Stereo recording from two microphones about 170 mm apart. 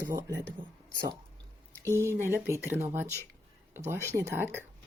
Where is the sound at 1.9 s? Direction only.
15° right (ahead or behind).